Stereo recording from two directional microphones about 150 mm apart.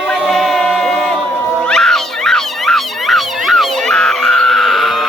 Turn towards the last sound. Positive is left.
turn(degrees=0)  # may be behind; listen again after turning